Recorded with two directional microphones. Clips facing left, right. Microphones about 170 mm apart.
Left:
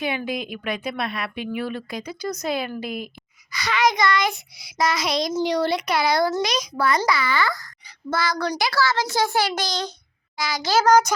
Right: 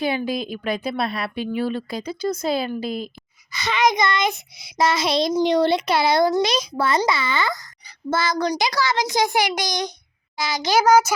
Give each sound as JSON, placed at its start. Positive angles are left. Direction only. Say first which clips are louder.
{"t": 0.0, "sound": "a woman's voice", "louder": "right 3 dB", "side_deg": -35}